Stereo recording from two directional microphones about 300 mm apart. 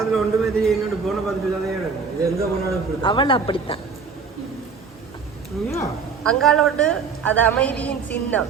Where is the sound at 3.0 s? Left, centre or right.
Centre.